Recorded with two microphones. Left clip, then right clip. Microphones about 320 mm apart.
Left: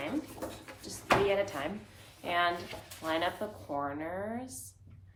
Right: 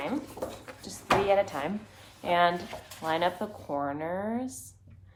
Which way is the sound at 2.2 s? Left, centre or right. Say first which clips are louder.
Right 5 dB; right.